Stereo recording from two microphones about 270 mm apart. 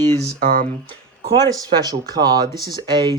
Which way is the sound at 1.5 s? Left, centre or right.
Centre.